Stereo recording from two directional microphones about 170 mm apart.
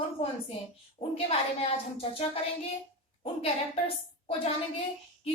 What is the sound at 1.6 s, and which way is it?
Speech, 35° left (ahead or behind).